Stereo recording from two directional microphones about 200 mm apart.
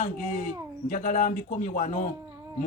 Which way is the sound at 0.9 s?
40° left (ahead or behind).